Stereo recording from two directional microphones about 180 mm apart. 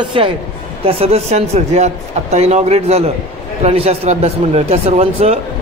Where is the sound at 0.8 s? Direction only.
35° right (ahead or behind).